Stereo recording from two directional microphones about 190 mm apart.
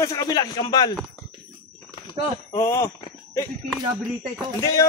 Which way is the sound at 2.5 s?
15° left (ahead or behind).